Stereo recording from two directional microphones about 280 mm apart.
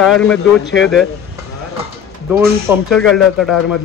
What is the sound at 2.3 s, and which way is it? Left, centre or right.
Speech, centre.